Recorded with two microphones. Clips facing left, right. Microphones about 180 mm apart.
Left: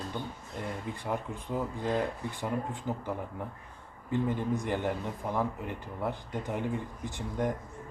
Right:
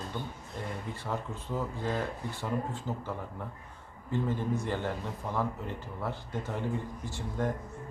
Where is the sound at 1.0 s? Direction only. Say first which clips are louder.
Left 2 dB; 15° left (ahead or behind).